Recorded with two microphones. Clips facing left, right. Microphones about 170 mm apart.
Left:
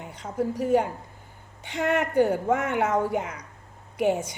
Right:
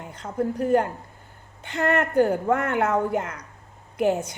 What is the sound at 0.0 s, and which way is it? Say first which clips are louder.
A woman's voice: right 1 dB; 5° left (ahead or behind).